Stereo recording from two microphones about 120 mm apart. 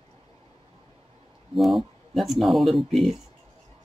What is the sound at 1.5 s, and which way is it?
Speech, centre (ahead or behind).